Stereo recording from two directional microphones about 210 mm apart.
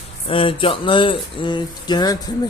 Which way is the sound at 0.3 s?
25° left (ahead or behind).